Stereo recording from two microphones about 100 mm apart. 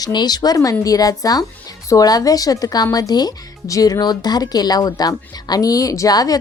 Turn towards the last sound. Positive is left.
turn(degrees=40)  # may be behind; listen again after turning